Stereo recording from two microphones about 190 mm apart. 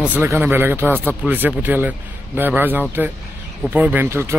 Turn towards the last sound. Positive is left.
turn(degrees=-15)  # may be behind; listen again after turning